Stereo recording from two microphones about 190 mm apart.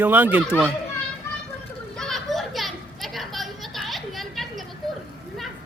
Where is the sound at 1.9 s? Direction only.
Centre (ahead or behind).